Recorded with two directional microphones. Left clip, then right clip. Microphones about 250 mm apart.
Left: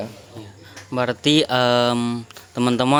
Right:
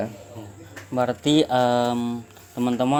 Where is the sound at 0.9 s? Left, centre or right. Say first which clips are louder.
Left 2 dB; left.